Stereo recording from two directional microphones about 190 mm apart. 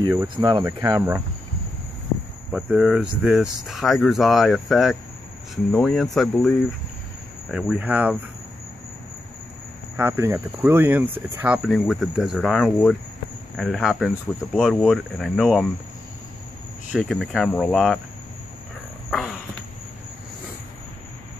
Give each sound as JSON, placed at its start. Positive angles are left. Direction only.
{"t": 0.1, "sound": "speech", "side_deg": -20}
{"t": 2.5, "sound": "speech", "side_deg": -5}
{"t": 7.5, "sound": "speech", "side_deg": -5}
{"t": 9.9, "sound": "speech", "side_deg": -15}
{"t": 16.9, "sound": "speech", "side_deg": 0}
{"t": 19.0, "sound": "a sound", "side_deg": 0}